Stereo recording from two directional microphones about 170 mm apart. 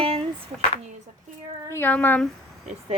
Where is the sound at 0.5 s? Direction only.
Centre (ahead or behind).